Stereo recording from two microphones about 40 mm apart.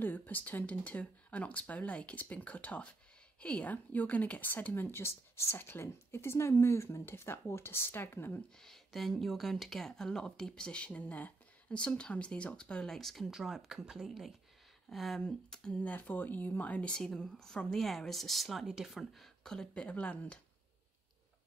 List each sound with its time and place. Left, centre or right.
0.0 s a woman's voice: left
3.6 s speech: left
4.7 s a woman's voice: left
8.5 s speech: centre; by 10.9 s left
10.9 s speech: left
11.7 s speech: left
12.9 s speech: centre
13.3 s speech: centre
15.7 s speech: left
17.3 s speech: centre
18.7 s speech: centre
18.9 s speech: centre
19.4 s speech: centre
19.7 s speech: left